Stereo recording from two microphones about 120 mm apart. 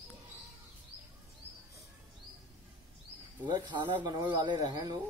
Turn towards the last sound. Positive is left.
turn(degrees=-35)  # may be behind; listen again after turning